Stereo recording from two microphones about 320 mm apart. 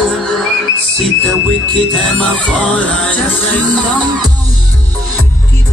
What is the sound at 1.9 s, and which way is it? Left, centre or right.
Music, centre.